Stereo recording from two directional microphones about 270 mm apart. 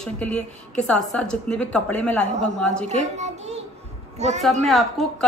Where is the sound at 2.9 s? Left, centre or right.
Right.